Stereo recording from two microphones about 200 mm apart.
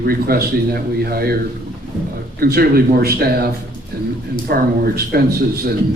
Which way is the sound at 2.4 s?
50° right (ahead or behind).